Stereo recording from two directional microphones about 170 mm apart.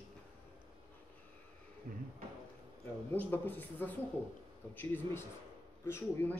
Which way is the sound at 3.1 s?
10° left (ahead or behind).